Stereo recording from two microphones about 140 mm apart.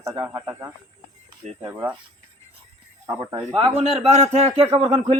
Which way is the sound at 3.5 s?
50° right (ahead or behind).